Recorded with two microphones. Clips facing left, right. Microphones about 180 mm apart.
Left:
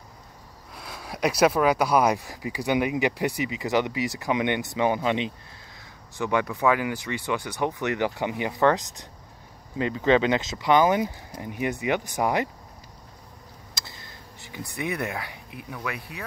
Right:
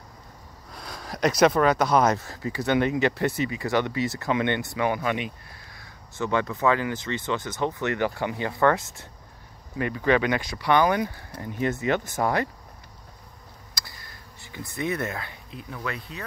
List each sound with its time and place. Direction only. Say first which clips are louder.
0.7 s speech: right 1 dB; 5° left (ahead or behind)
13.7 s speech: left 1 dB; 20° left (ahead or behind)